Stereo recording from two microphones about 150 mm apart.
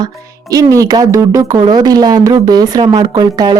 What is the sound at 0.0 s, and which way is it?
Speech, 25° right (ahead or behind).